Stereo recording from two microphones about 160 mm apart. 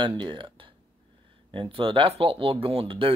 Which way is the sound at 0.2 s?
30° right (ahead or behind).